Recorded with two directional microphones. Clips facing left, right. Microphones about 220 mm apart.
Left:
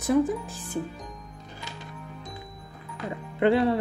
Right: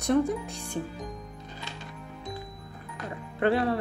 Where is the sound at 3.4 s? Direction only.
25° left (ahead or behind).